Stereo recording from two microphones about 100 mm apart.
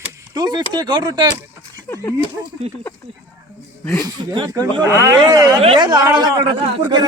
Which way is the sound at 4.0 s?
50° right (ahead or behind).